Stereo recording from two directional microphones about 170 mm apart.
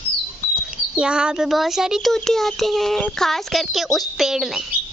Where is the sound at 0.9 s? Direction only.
5° right (ahead or behind).